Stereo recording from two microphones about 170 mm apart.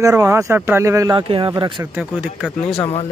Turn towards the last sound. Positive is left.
turn(degrees=35)  # may be behind; listen again after turning